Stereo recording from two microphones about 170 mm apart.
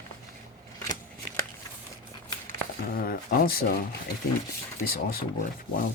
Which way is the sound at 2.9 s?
60° left (ahead or behind).